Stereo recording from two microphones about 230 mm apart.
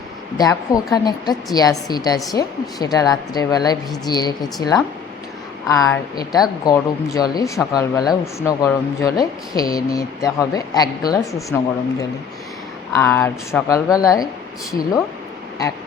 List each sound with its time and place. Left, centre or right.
0.3 s speech: centre
5.6 s speech: centre